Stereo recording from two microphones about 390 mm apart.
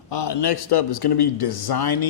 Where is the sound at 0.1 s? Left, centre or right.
Left.